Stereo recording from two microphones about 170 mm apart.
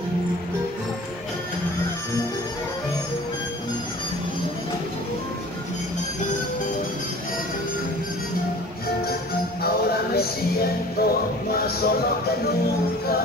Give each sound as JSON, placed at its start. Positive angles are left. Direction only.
{"t": 9.6, "sound": "music", "side_deg": 65}